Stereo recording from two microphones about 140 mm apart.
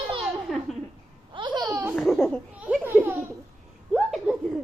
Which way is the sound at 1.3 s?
35° right (ahead or behind).